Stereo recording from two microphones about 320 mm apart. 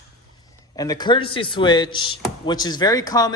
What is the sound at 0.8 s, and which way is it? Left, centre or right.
A man's voice, centre.